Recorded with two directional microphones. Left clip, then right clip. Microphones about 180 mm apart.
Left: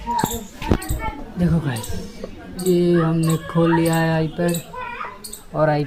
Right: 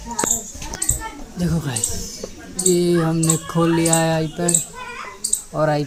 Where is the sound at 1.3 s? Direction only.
10° right (ahead or behind).